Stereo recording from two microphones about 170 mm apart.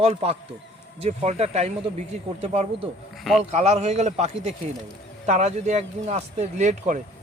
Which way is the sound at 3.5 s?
40° right (ahead or behind).